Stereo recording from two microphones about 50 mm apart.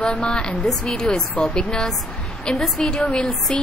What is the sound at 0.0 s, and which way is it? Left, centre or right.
Speech, centre.